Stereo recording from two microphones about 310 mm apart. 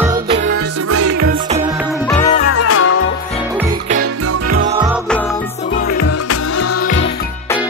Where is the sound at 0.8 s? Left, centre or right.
Right.